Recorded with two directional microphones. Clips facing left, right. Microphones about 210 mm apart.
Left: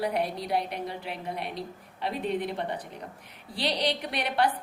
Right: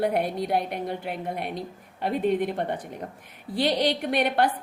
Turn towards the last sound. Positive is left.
turn(degrees=-55)  # may be behind; listen again after turning